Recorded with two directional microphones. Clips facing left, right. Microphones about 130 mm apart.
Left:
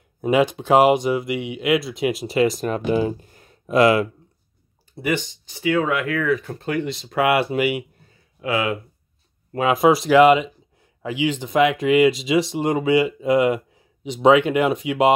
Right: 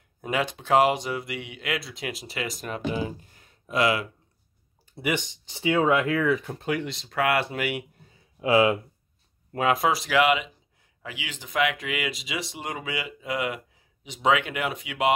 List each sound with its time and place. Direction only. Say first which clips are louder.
0.2 s speech: left 10 dB; 15° left (ahead or behind)
2.6 s speech: left 8 dB; 50° left (ahead or behind)
5.0 s speech: left 4 dB; 15° right (ahead or behind)
6.4 s speech: left 4 dB; 10° right (ahead or behind)
7.1 s speech: left 5 dB; 10° left (ahead or behind)
8.4 s speech: right 2 dB; 25° right (ahead or behind)
9.5 s speech: left 4 dB; centre (ahead or behind)
9.8 s speech: left 9 dB; 20° left (ahead or behind)
10.1 s speech: left 9 dB; 35° left (ahead or behind)
11.0 s speech: left 16 dB; 25° left (ahead or behind)